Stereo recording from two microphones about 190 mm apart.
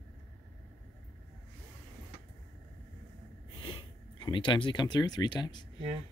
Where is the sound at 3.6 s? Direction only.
25° left (ahead or behind).